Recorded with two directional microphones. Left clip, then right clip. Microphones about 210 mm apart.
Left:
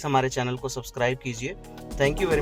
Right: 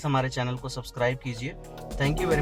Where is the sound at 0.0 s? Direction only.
45° left (ahead or behind).